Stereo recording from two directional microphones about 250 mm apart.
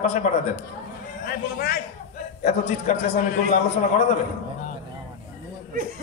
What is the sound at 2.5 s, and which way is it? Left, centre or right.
A man's voice, left.